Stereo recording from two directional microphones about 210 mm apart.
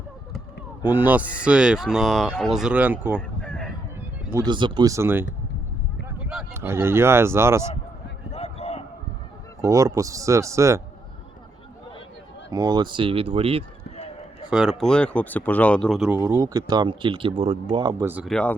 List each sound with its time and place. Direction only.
0.9 s speech: 10° right (ahead or behind)
3.2 s a sound: 5° left (ahead or behind)
4.3 s speech: 15° right (ahead or behind)
8.3 s basketball bounce: 30° left (ahead or behind)
9.6 s speech: 15° right (ahead or behind)
12.5 s speech: 15° right (ahead or behind)
14.5 s speech: centre (ahead or behind)
16.2 s speech: 15° right (ahead or behind)
18.0 s speech: 5° right (ahead or behind)